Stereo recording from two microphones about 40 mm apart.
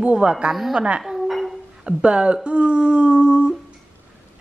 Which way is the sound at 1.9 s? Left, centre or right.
Right.